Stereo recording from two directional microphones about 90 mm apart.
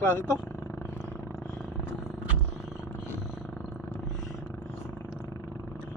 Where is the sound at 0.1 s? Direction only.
25° left (ahead or behind).